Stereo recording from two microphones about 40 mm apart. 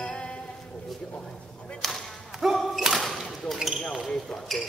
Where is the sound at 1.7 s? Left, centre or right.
Centre.